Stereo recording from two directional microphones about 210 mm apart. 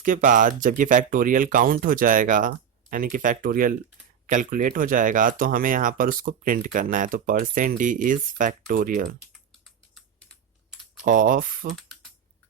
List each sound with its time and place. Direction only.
0.0 s speech: 40° right (ahead or behind)
9.9 s typing: centre (ahead or behind)
11.0 s speech: 40° right (ahead or behind)